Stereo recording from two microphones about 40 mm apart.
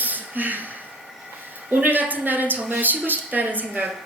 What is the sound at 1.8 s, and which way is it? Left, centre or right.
A woman's voice, right.